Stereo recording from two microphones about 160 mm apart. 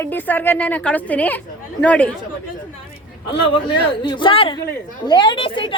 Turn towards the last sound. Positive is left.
turn(degrees=30)  # may be behind; listen again after turning